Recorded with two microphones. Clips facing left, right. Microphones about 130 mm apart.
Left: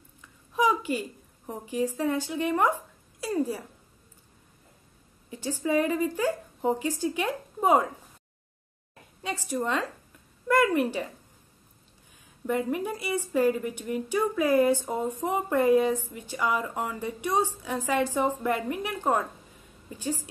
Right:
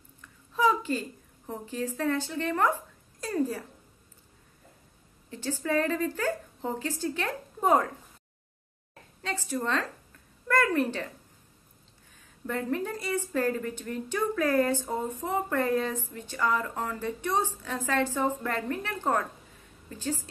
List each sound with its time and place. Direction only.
0.5 s a sound: 15° left (ahead or behind)
1.5 s a woman's voice: 15° left (ahead or behind)
5.3 s a woman's voice: 15° left (ahead or behind)
9.2 s a woman's voice: 15° left (ahead or behind)
12.4 s a woman's voice: 15° left (ahead or behind)